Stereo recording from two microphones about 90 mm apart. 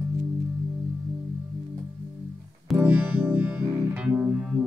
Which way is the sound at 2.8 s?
25° right (ahead or behind).